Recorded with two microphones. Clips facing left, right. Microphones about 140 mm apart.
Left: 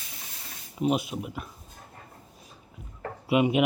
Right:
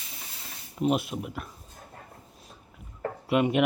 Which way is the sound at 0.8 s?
Centre (ahead or behind).